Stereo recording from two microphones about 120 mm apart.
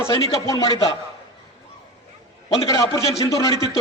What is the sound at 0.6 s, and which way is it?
Speech, 45° left (ahead or behind).